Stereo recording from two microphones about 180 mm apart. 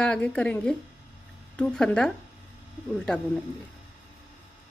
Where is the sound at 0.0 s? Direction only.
5° left (ahead or behind).